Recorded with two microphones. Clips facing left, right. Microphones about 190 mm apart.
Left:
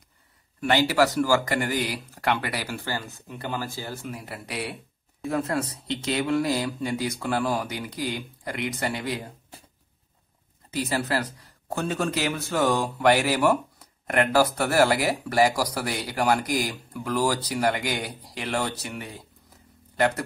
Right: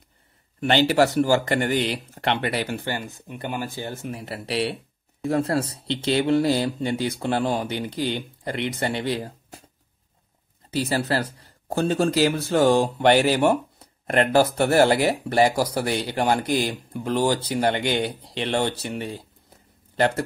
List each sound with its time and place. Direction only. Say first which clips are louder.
0.6 s speech: right 3 dB; 25° right (ahead or behind)
10.7 s speech: right 3 dB; 30° right (ahead or behind)